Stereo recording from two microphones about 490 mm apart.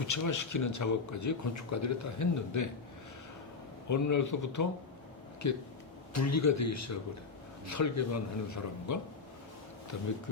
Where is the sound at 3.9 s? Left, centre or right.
Left.